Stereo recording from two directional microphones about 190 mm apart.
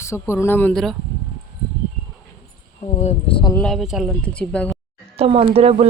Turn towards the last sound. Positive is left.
turn(degrees=-30)  # may be behind; listen again after turning